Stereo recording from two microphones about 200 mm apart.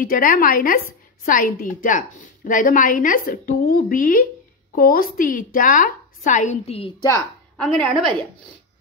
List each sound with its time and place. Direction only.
0.0 s a woman's voice: 45° left (ahead or behind)
7.5 s a woman's voice: centre (ahead or behind)